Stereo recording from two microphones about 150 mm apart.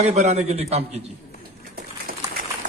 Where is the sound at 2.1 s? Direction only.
75° right (ahead or behind).